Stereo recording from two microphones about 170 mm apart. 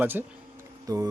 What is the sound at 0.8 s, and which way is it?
Music, 20° right (ahead or behind).